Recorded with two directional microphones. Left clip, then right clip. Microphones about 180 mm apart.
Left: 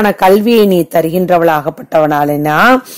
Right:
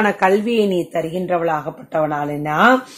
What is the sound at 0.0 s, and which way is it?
A man's voice, 45° left (ahead or behind).